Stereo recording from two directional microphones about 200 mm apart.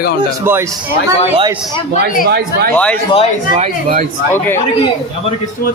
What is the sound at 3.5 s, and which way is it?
Speech, 40° right (ahead or behind).